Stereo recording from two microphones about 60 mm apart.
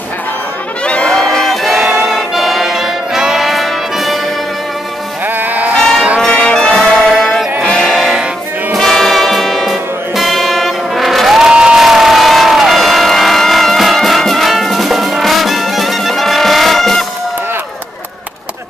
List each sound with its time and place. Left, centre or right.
0.8 s music: centre
5.4 s sheep: right
5.8 s music: centre
6.2 s brass instrument: centre
7.1 s music: centre
11.5 s vehicle: centre